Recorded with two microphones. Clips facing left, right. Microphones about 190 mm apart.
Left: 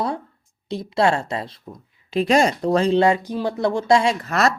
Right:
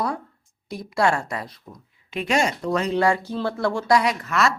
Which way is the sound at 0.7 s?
25° left (ahead or behind).